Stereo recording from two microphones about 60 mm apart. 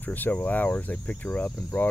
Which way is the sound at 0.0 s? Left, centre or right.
Left.